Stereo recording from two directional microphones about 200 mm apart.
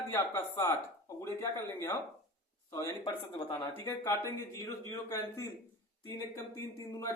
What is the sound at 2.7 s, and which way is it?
Speech, 20° left (ahead or behind).